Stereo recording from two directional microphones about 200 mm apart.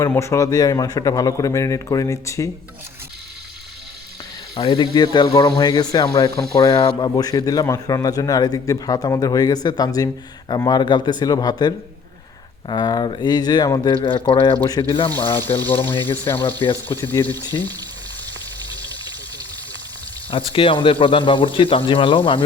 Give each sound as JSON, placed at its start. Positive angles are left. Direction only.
{"t": 0.0, "sound": "a man's voice", "side_deg": 15}
{"t": 4.5, "sound": "a man's voice", "side_deg": 25}
{"t": 15.8, "sound": "a man's voice", "side_deg": 10}
{"t": 16.4, "sound": "a man's voice", "side_deg": 25}
{"t": 16.9, "sound": "a man's voice", "side_deg": 15}
{"t": 20.3, "sound": "a man's voice", "side_deg": 25}